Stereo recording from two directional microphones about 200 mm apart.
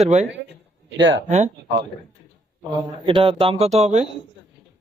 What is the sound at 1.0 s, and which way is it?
Speech, 65° right (ahead or behind).